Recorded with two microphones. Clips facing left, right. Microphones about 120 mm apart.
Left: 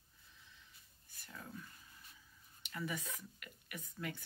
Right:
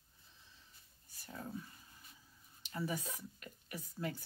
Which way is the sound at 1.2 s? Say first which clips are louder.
Right 5 dB; 35° right (ahead or behind).